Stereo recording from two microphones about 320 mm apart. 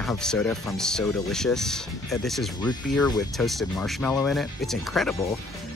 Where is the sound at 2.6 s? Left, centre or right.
Centre.